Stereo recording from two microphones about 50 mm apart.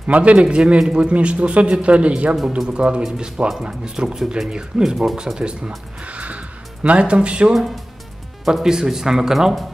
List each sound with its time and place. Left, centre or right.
0.0 s a man's voice: right
7.5 s speech: centre